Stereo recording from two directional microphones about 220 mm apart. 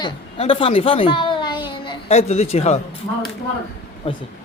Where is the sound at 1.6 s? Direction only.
20° left (ahead or behind).